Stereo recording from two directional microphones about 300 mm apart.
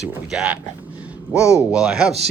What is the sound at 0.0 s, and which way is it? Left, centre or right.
Speech, centre.